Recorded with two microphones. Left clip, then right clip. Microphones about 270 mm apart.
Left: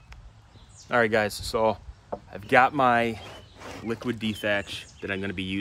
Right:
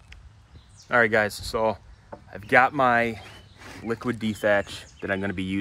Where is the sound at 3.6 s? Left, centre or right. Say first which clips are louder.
Left 1 dB; left.